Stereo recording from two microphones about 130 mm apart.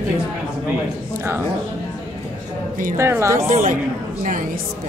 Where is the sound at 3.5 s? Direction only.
80° right.